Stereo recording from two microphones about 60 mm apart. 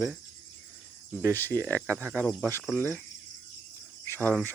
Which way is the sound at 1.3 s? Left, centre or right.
Left.